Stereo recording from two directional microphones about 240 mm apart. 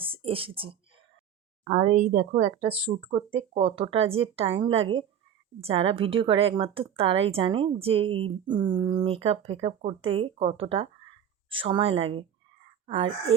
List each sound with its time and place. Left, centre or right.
0.0 s speech: right
12.8 s chicken: right